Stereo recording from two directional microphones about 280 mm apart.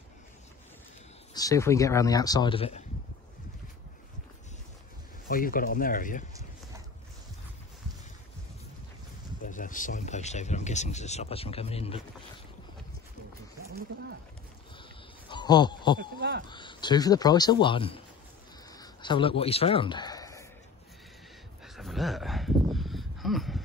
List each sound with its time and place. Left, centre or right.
1.3 s speech: centre
5.3 s speech: left
9.4 s speech: left
15.2 s a sound: centre
16.2 s speech: right
16.4 s speech: centre
21.6 s a sound: centre